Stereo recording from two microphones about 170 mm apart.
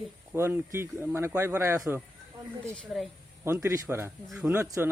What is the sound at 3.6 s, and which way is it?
Speech, 15° right (ahead or behind).